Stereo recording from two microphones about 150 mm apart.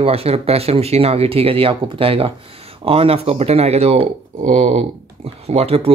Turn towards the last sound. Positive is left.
turn(degrees=-40)  # may be behind; listen again after turning